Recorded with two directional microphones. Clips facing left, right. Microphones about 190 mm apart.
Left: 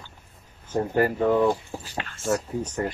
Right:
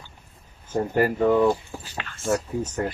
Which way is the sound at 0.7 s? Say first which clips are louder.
Right 1 dB; 5° right (ahead or behind).